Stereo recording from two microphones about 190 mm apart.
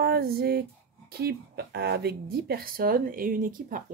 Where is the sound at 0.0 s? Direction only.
55° right (ahead or behind).